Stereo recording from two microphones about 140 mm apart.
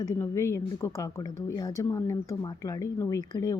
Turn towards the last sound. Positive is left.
turn(degrees=25)  # may be behind; listen again after turning